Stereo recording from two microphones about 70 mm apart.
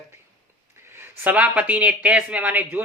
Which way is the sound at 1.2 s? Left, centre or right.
Right.